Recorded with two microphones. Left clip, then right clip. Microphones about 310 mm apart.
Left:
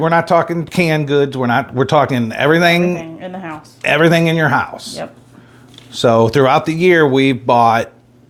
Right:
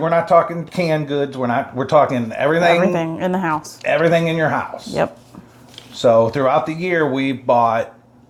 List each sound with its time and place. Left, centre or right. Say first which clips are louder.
0.0 s speech: left 1 dB; left
3.0 s speech: right 7 dB; right
3.8 s speech: left 3 dB; left
5.9 s speech: left 2 dB; left